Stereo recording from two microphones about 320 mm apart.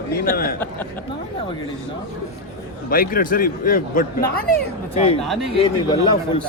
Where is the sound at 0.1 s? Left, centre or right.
Left.